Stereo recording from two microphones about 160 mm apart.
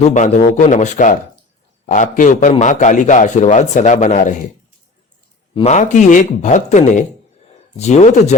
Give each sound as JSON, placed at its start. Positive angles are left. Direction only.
{"t": 0.0, "sound": "a man's voice", "side_deg": 50}
{"t": 5.5, "sound": "a man's voice", "side_deg": 45}